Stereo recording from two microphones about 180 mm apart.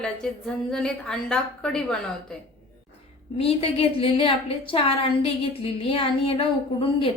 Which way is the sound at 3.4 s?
30° left (ahead or behind).